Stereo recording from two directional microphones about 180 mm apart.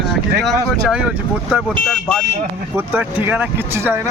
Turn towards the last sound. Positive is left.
turn(degrees=-10)  # may be behind; listen again after turning